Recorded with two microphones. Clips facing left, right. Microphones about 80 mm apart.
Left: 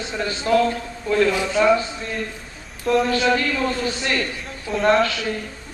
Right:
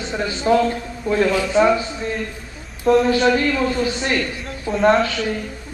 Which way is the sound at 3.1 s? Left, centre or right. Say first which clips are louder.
Right 3 dB; centre.